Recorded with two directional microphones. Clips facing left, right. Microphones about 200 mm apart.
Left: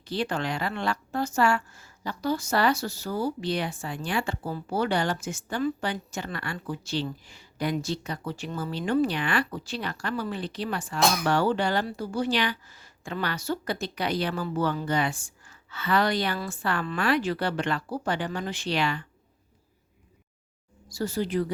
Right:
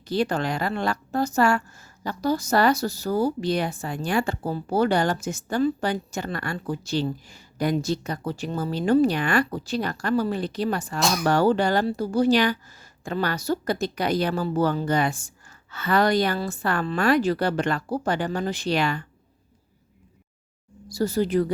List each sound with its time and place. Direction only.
0.0 s a woman's voice: 40° right (ahead or behind)
20.8 s speech: 40° right (ahead or behind)